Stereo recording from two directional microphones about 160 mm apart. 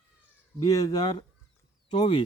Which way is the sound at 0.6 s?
25° left (ahead or behind).